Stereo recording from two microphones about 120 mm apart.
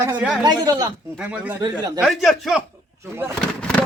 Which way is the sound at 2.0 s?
Centre (ahead or behind).